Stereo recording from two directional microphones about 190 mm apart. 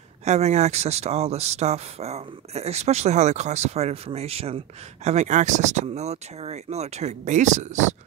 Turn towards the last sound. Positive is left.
turn(degrees=-40)  # may be behind; listen again after turning